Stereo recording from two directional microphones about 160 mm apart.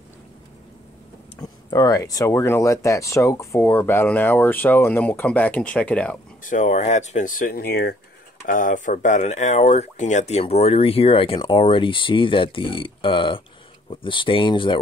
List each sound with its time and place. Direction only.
1.4 s speech: 25° left (ahead or behind); by 6.1 s 10° left (ahead or behind)
6.4 s speech: 50° left (ahead or behind); by 7.9 s 80° left
8.5 s speech: 55° left (ahead or behind); by 14.8 s 30° left (ahead or behind)